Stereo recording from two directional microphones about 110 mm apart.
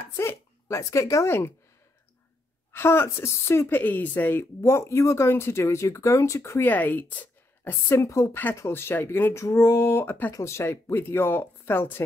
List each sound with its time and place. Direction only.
0.2 s speech: 25° left (ahead or behind)
2.7 s a woman's voice: 20° left (ahead or behind)
6.7 s a woman's voice: 15° left (ahead or behind)